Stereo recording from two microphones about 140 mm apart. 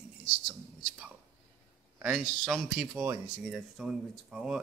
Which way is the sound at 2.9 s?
15° right (ahead or behind).